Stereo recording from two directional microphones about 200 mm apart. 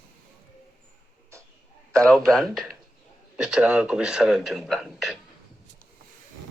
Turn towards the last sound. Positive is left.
turn(degrees=0)  # may be behind; listen again after turning